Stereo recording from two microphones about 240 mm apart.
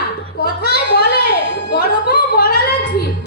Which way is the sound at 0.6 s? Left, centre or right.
Left.